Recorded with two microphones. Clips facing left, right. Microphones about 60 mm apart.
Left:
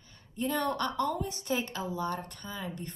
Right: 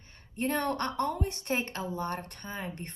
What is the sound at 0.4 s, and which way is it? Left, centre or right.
A woman's voice, right.